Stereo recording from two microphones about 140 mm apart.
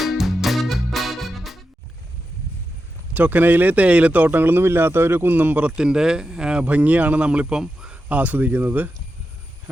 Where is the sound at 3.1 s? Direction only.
10° right (ahead or behind).